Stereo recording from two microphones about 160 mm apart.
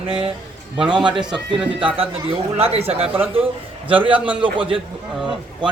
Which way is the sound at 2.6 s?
40° right (ahead or behind).